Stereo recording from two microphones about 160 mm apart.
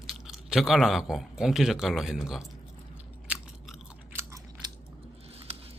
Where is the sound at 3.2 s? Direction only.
10° right (ahead or behind).